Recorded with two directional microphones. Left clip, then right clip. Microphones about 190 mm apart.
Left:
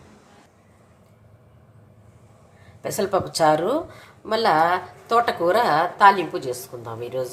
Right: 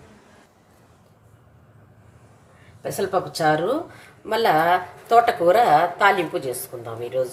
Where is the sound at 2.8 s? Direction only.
30° left (ahead or behind).